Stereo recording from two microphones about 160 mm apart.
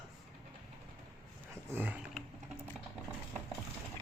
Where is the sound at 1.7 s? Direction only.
10° right (ahead or behind).